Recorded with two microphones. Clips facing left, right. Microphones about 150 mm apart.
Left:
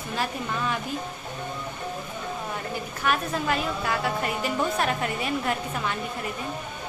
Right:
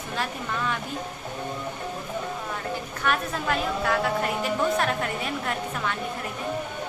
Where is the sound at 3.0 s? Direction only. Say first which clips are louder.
Left 1 dB; 5° left (ahead or behind).